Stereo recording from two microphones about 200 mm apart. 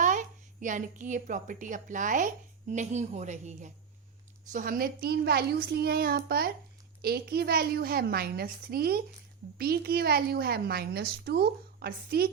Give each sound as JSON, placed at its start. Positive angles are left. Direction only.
{"t": 0.0, "sound": "a woman's voice", "side_deg": -40}